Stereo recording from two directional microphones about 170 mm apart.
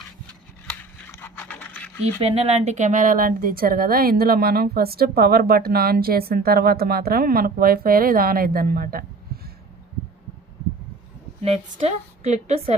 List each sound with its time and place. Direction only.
0.7 s a sound: 10° left (ahead or behind)
2.2 s a woman's voice: 35° right (ahead or behind); by 9.4 s 60° right (ahead or behind)
11.4 s a woman's voice: 35° right (ahead or behind)